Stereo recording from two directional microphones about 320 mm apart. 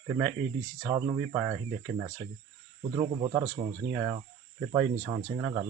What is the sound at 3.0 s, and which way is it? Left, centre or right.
Speech, centre.